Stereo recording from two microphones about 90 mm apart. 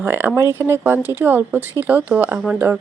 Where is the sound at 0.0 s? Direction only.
25° right (ahead or behind).